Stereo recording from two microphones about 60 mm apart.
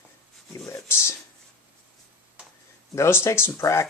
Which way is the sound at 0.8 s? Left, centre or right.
Left.